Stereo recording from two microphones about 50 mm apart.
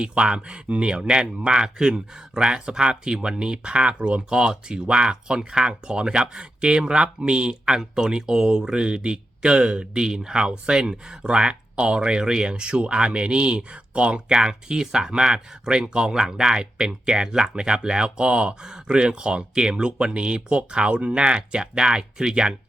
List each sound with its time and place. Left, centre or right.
0.0 s speech: centre